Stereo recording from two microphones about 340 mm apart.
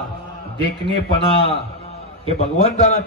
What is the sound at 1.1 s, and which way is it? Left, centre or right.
A man's voice, centre.